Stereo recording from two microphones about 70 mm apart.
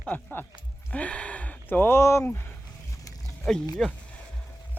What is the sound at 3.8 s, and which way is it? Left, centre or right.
Speech, centre.